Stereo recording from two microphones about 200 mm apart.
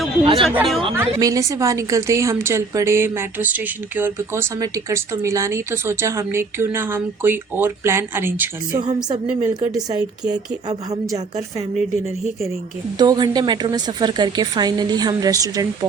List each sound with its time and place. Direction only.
0.4 s speech: centre (ahead or behind)
0.9 s a woman's voice: 15° right (ahead or behind)
13.0 s a woman's voice: 20° right (ahead or behind)